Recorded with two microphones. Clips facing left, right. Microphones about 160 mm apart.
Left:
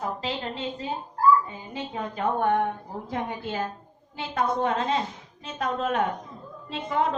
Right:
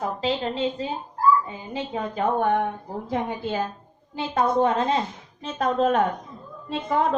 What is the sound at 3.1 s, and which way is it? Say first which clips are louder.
A woman's voice: right 4 dB; 30° right (ahead or behind).